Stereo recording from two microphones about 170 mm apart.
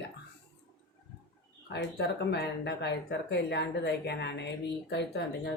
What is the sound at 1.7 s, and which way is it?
Speech, 80° left.